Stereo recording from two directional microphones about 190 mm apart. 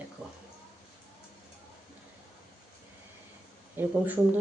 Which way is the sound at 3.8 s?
10° right (ahead or behind).